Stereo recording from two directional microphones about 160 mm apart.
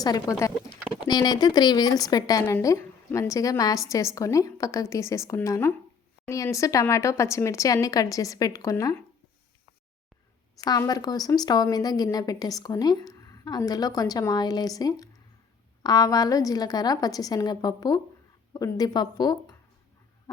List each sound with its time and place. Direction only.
0.0 s speech: 20° left (ahead or behind)
10.6 s speech: 25° left (ahead or behind)